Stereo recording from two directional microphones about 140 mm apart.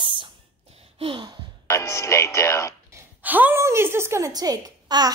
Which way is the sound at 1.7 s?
20° left (ahead or behind).